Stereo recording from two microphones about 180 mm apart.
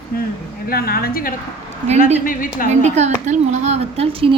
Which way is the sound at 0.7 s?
60° left (ahead or behind).